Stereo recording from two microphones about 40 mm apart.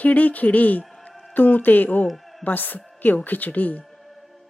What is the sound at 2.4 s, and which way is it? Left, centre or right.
Speech, left.